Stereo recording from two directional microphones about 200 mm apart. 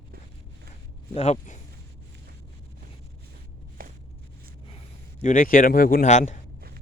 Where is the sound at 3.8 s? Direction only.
45° right (ahead or behind).